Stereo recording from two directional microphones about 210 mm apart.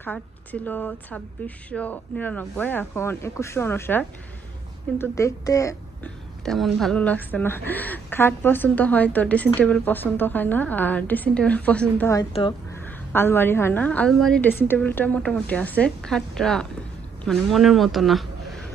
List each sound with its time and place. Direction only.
0.0 s a woman's voice: 10° left (ahead or behind)
6.4 s a woman's voice: centre (ahead or behind)
12.3 s speech: 30° left (ahead or behind)
12.8 s a woman's voice: 10° left (ahead or behind)